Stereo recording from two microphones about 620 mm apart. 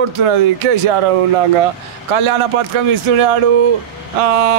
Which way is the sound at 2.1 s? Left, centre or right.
Right.